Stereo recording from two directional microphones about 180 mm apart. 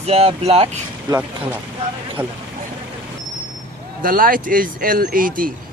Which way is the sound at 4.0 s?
50° right (ahead or behind).